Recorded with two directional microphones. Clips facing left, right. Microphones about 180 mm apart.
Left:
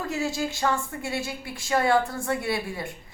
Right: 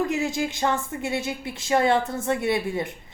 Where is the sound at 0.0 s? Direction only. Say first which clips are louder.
Right 3 dB; 20° right (ahead or behind).